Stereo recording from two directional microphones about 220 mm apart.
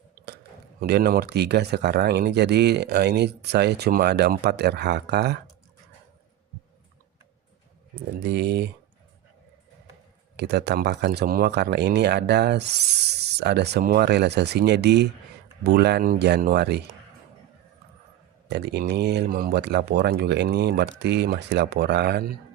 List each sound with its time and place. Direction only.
0.8 s speech: 45° right (ahead or behind)
7.9 s speech: 50° right (ahead or behind)
10.3 s speech: 50° right (ahead or behind)
18.4 s speech: 50° right (ahead or behind)